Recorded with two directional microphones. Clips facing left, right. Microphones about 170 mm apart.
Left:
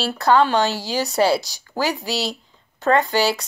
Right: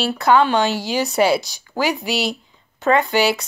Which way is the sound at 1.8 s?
15° right (ahead or behind).